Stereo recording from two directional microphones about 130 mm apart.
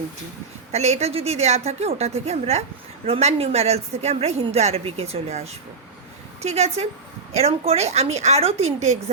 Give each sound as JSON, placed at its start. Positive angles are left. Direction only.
{"t": 0.7, "sound": "a woman's voice", "side_deg": -60}